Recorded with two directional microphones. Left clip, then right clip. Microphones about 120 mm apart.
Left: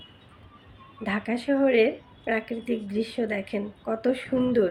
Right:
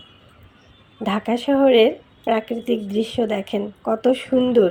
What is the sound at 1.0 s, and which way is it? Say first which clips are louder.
A woman's voice: right 6 dB; 65° right (ahead or behind).